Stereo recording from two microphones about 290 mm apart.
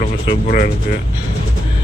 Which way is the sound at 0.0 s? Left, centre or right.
Left.